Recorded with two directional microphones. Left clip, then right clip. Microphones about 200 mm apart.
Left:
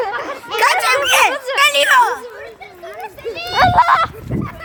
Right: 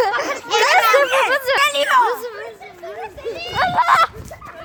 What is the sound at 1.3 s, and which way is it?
Speech, 30° right (ahead or behind).